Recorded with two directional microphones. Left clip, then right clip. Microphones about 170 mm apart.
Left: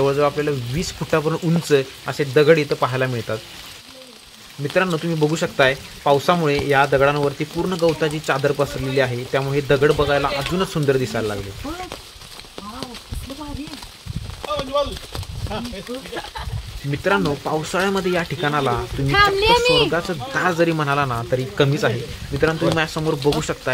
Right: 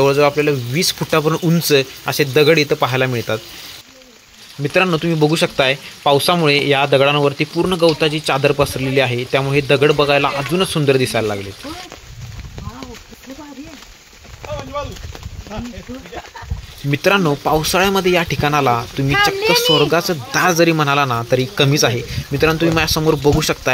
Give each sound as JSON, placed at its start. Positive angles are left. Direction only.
{"t": 0.0, "sound": "speech", "side_deg": -10}
{"t": 4.7, "sound": "speech", "side_deg": -10}
{"t": 16.9, "sound": "speech", "side_deg": -15}
{"t": 19.1, "sound": "a child's voice", "side_deg": -40}
{"t": 19.9, "sound": "speech", "side_deg": -15}